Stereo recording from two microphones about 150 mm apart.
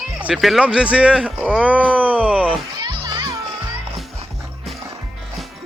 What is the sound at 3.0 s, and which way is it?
Music, 30° right (ahead or behind).